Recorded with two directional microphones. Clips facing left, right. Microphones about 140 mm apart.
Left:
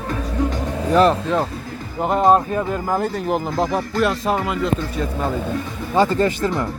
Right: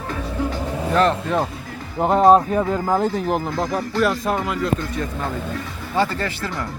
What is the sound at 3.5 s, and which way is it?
Speech, 25° left (ahead or behind).